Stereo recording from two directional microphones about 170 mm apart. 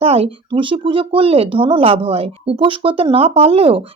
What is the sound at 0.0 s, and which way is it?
Speech, 35° right (ahead or behind).